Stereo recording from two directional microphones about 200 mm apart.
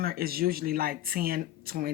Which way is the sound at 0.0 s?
50° right (ahead or behind).